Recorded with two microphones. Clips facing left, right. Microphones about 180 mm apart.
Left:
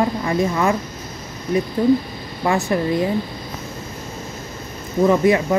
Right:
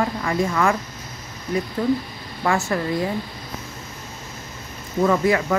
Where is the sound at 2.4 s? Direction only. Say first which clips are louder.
Left 3 dB; 20° left (ahead or behind).